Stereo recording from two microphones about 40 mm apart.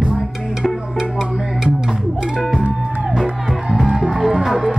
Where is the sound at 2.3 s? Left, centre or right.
Centre.